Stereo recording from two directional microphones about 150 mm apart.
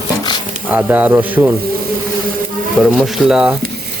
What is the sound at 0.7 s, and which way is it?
Speech, 10° right (ahead or behind).